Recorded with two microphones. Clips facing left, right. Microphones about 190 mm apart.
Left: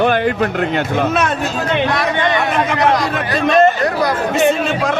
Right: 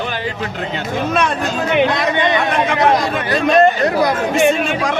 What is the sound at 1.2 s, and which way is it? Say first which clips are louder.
Speech: even; 5° left (ahead or behind).